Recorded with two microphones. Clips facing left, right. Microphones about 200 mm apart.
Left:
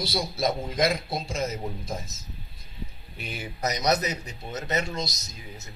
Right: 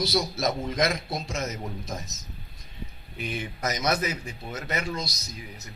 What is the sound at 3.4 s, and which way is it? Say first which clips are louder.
Speech: left 2 dB; 35° left (ahead or behind).